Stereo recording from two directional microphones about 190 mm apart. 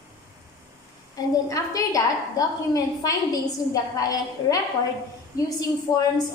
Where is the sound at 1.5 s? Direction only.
20° left (ahead or behind).